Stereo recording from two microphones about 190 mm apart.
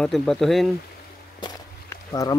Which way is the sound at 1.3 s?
20° left (ahead or behind).